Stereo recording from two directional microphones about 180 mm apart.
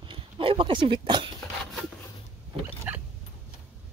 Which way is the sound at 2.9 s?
10° right (ahead or behind).